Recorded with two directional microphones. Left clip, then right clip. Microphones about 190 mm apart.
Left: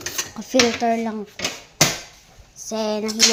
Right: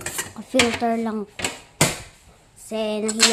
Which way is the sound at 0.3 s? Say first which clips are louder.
Left 2 dB; 5° left (ahead or behind).